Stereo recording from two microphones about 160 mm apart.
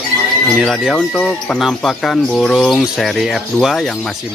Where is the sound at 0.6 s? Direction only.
Centre (ahead or behind).